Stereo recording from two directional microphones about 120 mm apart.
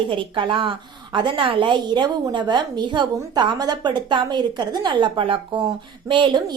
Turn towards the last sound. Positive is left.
turn(degrees=-40)  # may be behind; listen again after turning